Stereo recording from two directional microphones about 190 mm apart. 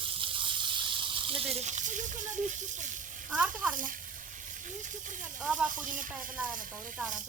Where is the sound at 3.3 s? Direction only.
5° right (ahead or behind).